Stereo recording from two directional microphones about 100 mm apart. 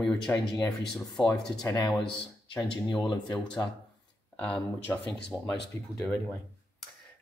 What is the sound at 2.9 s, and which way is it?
Speech, 45° left (ahead or behind).